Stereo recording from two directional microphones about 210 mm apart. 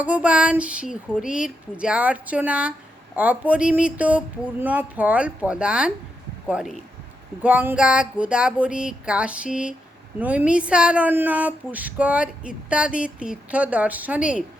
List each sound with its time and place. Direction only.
0.0 s speech: 5° right (ahead or behind)